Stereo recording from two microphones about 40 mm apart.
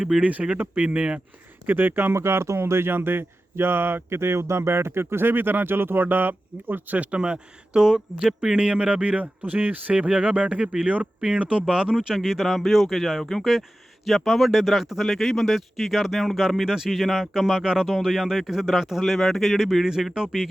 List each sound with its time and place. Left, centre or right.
0.2 s speech: right
1.6 s speech: right
6.1 s speech: right
7.2 s speech: right
8.5 s speech: right
9.2 s speech: right
10.8 s speech: right
11.3 s speech: right